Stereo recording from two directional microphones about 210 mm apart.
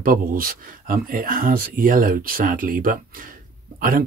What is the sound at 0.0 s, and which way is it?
Speech, 40° right (ahead or behind).